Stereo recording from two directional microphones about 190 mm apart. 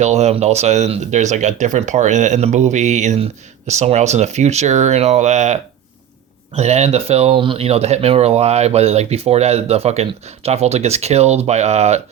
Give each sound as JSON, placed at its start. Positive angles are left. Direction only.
{"t": 0.0, "sound": "speech", "side_deg": -35}